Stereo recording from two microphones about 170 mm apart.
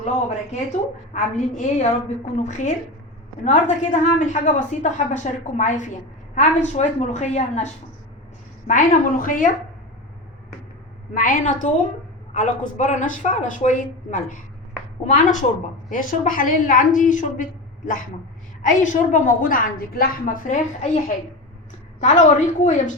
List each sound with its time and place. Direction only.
0.0 s a woman's voice: 45° left (ahead or behind)
11.1 s a woman's voice: 50° left (ahead or behind)
22.0 s a woman's voice: 45° left (ahead or behind)